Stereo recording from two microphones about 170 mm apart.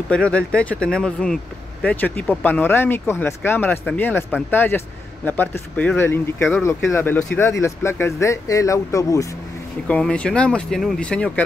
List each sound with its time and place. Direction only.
0.1 s speech: 5° left (ahead or behind)
9.8 s speech: 5° left (ahead or behind)